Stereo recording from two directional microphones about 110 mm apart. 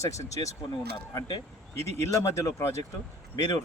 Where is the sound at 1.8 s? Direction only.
75° right (ahead or behind).